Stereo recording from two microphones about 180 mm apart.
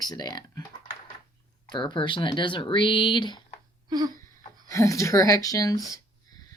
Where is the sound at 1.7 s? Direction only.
25° left (ahead or behind).